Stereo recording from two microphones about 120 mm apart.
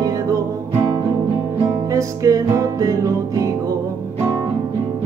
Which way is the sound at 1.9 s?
25° right (ahead or behind).